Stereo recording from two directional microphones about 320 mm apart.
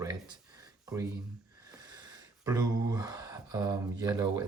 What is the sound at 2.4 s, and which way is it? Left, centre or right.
Speech, centre.